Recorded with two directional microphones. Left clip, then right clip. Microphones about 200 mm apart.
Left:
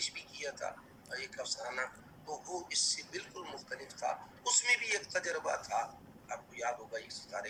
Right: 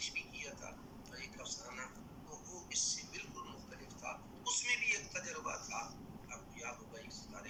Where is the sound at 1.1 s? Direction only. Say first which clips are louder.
Left 8 dB; 45° left (ahead or behind).